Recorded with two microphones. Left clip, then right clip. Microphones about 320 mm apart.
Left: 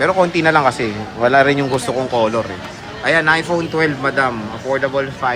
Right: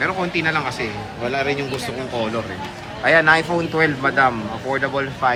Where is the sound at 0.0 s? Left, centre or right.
Centre.